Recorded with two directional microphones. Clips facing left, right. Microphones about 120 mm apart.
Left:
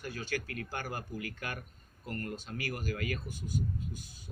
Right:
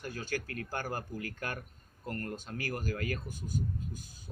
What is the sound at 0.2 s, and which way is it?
Speech, 40° right (ahead or behind).